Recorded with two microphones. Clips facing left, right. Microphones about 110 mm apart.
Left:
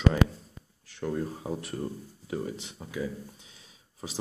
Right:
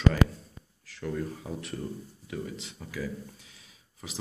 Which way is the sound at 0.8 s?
30° left (ahead or behind).